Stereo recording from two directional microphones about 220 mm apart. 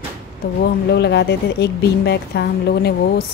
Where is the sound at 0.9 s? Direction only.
50° left (ahead or behind).